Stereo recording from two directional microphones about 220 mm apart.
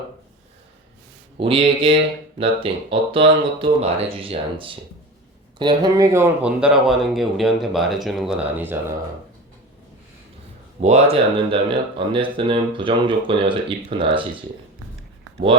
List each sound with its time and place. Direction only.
1.4 s speech: 25° right (ahead or behind); by 8.8 s 10° right (ahead or behind)
10.8 s speech: 30° right (ahead or behind)